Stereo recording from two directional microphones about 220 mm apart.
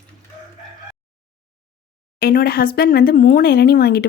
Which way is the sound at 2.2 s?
45° left (ahead or behind).